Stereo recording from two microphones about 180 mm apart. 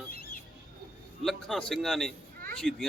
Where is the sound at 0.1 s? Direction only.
55° left (ahead or behind).